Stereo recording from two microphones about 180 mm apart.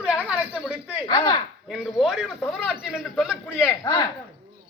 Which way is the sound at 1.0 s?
25° left (ahead or behind).